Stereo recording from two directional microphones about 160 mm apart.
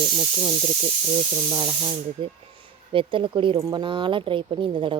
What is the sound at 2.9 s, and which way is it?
Speech, 30° right (ahead or behind).